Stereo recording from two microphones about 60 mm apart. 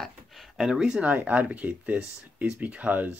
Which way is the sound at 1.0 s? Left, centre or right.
Right.